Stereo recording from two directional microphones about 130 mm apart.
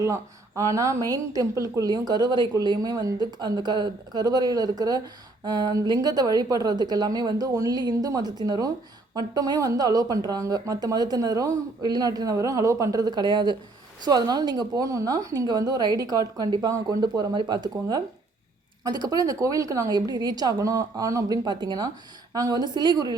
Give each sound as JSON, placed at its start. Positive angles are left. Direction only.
{"t": 0.0, "sound": "a woman's voice", "side_deg": -25}